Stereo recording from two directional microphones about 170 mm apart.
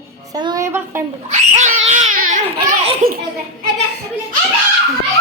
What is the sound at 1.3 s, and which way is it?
Crying, 45° right (ahead or behind).